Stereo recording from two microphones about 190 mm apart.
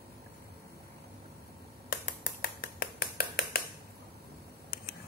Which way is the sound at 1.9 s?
50° left (ahead or behind).